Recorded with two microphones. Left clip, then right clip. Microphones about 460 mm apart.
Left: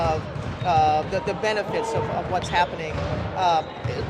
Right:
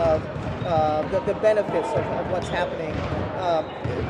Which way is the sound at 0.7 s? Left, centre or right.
Left.